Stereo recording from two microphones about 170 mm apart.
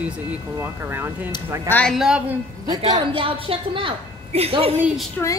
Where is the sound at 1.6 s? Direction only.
10° left (ahead or behind).